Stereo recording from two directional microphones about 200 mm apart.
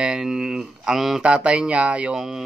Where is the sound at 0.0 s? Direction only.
5° right (ahead or behind).